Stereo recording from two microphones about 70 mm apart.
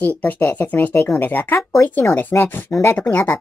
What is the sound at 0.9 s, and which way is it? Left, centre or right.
Speech, left.